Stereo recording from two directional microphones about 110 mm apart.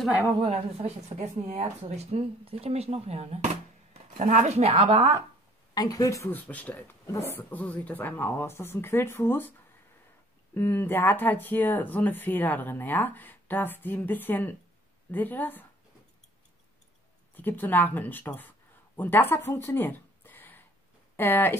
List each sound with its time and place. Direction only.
0.4 s speech: 60° right (ahead or behind)
4.2 s a woman's voice: 90° right; by 5.0 s 60° right (ahead or behind)
5.8 s speech: 35° left (ahead or behind); by 15.6 s 15° left (ahead or behind)
17.4 s speech: 15° left (ahead or behind)